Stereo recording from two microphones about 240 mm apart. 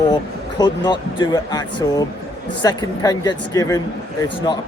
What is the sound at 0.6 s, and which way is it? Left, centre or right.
Speech, centre.